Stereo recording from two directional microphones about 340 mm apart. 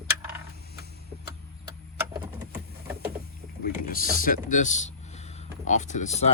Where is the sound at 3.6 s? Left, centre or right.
Left.